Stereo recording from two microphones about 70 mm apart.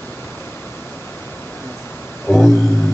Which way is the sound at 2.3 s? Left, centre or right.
Left.